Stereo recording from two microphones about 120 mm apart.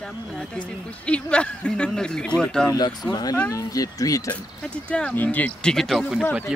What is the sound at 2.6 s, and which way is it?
Speech, 35° left (ahead or behind).